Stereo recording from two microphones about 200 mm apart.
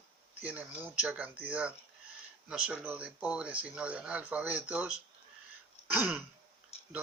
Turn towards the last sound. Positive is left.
turn(degrees=30)  # may be behind; listen again after turning